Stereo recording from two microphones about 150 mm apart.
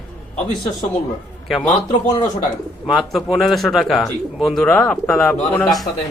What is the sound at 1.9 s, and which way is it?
Speech, 55° left (ahead or behind).